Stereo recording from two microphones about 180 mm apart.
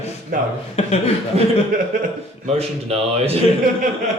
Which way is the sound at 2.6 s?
35° right (ahead or behind).